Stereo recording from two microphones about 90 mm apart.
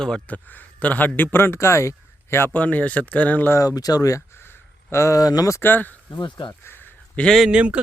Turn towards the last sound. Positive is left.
turn(degrees=-15)  # may be behind; listen again after turning